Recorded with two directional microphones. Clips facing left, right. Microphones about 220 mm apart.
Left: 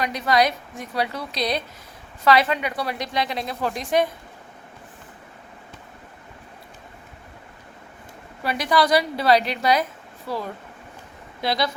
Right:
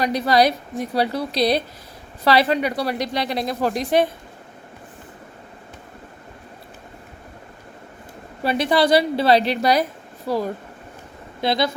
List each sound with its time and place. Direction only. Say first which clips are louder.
0.0 s a woman's voice: right 3 dB; 35° right (ahead or behind)
8.4 s a woman's voice: right 3 dB; 25° right (ahead or behind)
11.3 s speech: right 3 dB; 25° right (ahead or behind)